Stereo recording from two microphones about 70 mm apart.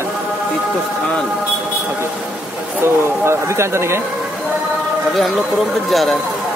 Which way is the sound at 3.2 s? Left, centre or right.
Right.